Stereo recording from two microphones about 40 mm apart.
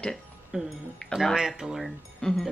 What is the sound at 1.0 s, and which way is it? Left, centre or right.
Speech, left.